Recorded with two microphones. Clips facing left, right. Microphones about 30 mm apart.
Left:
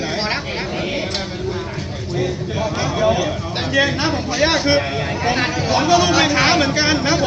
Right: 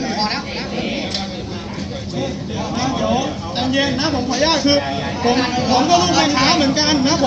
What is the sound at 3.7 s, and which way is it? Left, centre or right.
Speech, right.